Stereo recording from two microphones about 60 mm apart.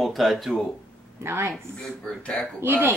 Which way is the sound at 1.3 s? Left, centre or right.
Right.